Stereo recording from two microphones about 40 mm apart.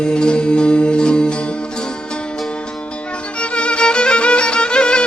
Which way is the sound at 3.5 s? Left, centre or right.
Left.